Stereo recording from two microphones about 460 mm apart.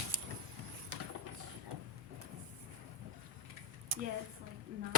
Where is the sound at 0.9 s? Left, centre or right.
Right.